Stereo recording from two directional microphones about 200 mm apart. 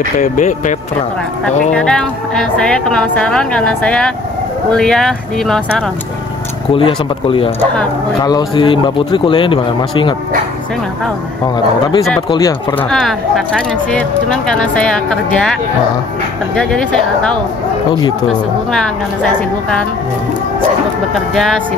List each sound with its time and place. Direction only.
0.2 s speech: 35° left (ahead or behind)
1.7 s a woman's voice: 5° left (ahead or behind)
6.7 s speech: 25° left (ahead or behind)
11.4 s speech: 20° left (ahead or behind)
13.6 s a woman's voice: 5° left (ahead or behind)
21.1 s a woman's voice: centre (ahead or behind)